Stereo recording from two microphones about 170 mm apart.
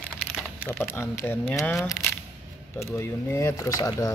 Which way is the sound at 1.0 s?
15° left (ahead or behind).